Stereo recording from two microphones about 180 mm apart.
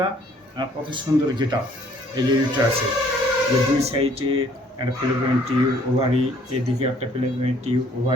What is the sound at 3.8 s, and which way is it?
Speech, 35° right (ahead or behind).